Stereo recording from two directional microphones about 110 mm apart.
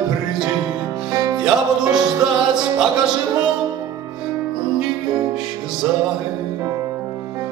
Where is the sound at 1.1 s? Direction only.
30° right (ahead or behind).